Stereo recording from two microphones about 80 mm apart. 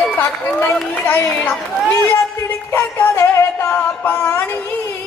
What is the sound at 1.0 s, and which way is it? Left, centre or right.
Speech, left.